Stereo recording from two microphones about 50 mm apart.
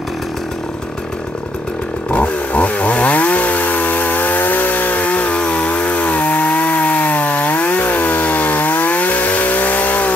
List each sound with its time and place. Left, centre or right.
2.0 s chainsaw: left